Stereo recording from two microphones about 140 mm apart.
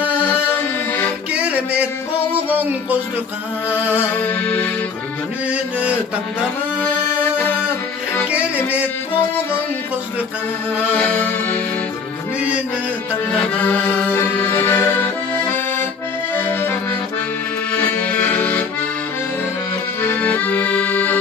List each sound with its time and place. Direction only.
0.3 s music: 15° left (ahead or behind)
1.3 s music: 10° right (ahead or behind)
2.5 s speech: 10° right (ahead or behind)
3.9 s music: 10° left (ahead or behind)
5.5 s mantra: 10° right (ahead or behind)
6.8 s music: 15° left (ahead or behind)
11.0 s music: 10° left (ahead or behind)
13.6 s accordion: 10° left (ahead or behind)
17.7 s accordion: 10° left (ahead or behind)
20.0 s accordion: 10° left (ahead or behind)